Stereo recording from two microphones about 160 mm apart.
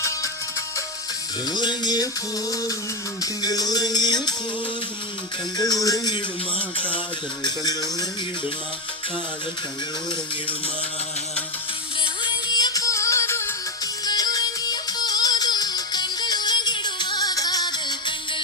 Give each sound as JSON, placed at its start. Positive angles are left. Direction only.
{"t": 1.5, "sound": "music", "side_deg": 25}
{"t": 3.4, "sound": "music", "side_deg": 25}
{"t": 5.5, "sound": "music", "side_deg": 25}
{"t": 7.4, "sound": "music", "side_deg": 25}
{"t": 12.2, "sound": "music", "side_deg": 25}